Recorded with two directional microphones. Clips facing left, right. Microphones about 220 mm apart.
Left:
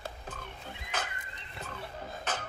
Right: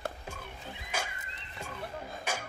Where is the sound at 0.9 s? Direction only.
10° right (ahead or behind).